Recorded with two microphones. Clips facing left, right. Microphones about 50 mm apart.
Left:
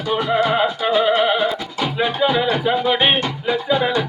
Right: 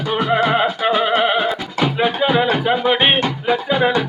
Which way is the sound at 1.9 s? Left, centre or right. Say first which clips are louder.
Right 1 dB; centre.